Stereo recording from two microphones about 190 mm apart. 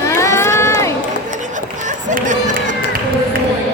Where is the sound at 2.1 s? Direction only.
40° right (ahead or behind).